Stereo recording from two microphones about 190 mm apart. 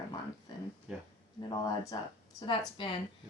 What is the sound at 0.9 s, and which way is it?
Speech, 5° right (ahead or behind).